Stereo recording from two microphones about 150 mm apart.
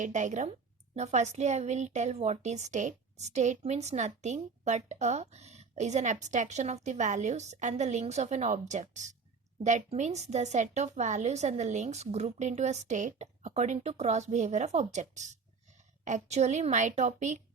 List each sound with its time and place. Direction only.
0.0 s a woman's voice: 55° right (ahead or behind)